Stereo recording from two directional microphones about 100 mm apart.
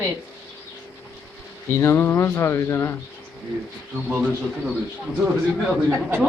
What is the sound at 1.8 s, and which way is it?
A man's voice, 25° left (ahead or behind).